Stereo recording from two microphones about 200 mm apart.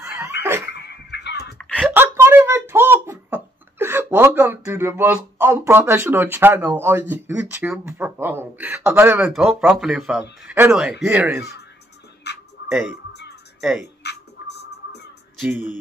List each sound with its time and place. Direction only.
0.4 s dog: 10° right (ahead or behind)
0.7 s a sound: 55° left (ahead or behind)
1.8 s speech: 10° right (ahead or behind)
9.3 s speech: centre (ahead or behind)
12.6 s speech: 5° right (ahead or behind)
14.0 s music: 55° left (ahead or behind)
15.3 s music: 5° right (ahead or behind)